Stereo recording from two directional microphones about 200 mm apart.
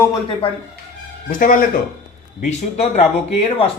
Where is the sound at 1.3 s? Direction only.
40° left (ahead or behind).